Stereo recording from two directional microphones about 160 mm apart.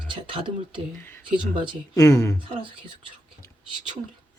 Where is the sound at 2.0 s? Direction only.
20° left (ahead or behind).